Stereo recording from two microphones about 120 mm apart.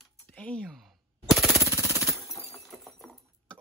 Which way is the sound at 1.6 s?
25° right (ahead or behind).